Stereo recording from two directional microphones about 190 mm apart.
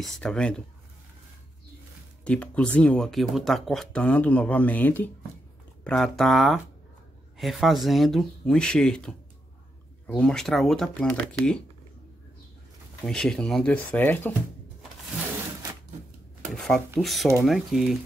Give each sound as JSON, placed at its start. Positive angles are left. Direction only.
{"t": 0.0, "sound": "speech", "side_deg": 5}
{"t": 2.2, "sound": "speech", "side_deg": 5}
{"t": 13.0, "sound": "speech", "side_deg": 5}
{"t": 16.5, "sound": "speech", "side_deg": 5}